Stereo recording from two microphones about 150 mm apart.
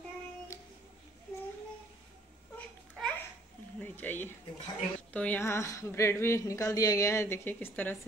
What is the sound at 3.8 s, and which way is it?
Speech, 10° left (ahead or behind).